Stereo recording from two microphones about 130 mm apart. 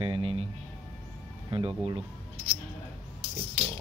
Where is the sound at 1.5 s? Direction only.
40° right (ahead or behind).